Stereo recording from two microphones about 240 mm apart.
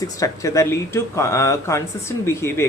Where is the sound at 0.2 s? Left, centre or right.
Centre.